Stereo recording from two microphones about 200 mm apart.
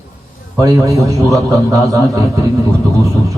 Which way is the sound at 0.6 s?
15° right (ahead or behind).